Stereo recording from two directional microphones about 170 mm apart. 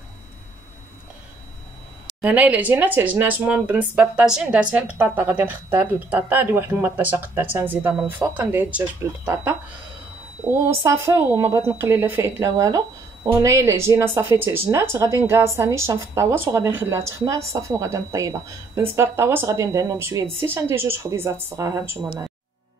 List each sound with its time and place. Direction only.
2.2 s speech: 10° right (ahead or behind)
10.7 s a woman's voice: 15° right (ahead or behind)